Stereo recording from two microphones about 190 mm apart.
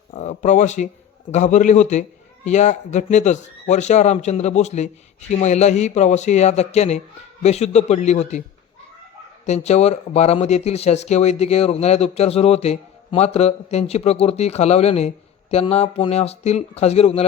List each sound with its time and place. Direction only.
0.1 s speech: 40° left (ahead or behind)
9.5 s speech: 35° left (ahead or behind)